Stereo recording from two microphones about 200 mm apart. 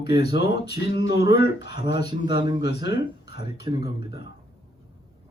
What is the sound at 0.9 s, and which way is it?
Speech, 20° right (ahead or behind).